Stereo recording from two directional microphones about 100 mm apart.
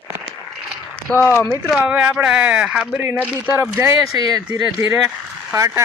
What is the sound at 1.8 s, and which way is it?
Speech, 15° right (ahead or behind).